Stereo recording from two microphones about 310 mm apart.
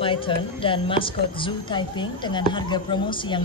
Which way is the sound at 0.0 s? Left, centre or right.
Centre.